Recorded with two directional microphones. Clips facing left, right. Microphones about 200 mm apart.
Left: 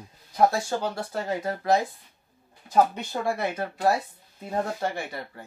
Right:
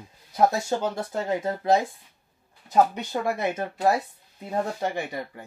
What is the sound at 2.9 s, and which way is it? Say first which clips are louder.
Speech: right 1 dB; 20° right (ahead or behind).